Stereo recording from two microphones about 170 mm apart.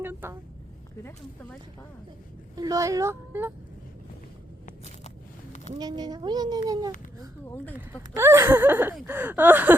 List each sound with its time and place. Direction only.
0.0 s speech: 10° right (ahead or behind)
2.6 s speech: 20° right (ahead or behind)
5.8 s a child's voice: 25° right (ahead or behind)
7.5 s speech: 10° left (ahead or behind)
7.8 s speech: 15° right (ahead or behind)